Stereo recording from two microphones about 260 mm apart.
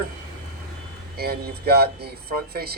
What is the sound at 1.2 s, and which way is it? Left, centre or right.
Speech, right.